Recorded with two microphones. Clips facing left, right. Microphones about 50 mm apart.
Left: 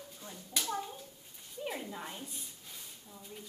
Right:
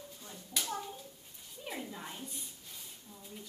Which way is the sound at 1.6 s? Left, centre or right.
Centre.